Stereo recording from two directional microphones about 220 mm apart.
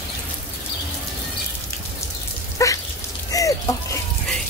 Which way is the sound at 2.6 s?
15° left (ahead or behind).